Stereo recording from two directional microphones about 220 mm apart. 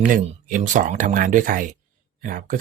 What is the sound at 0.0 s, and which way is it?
Speech, 35° right (ahead or behind).